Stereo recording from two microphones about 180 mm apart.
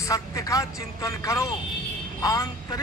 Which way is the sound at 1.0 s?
15° left (ahead or behind).